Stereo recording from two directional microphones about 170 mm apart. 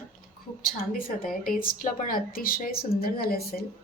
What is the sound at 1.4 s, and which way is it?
A woman's voice, 55° left (ahead or behind).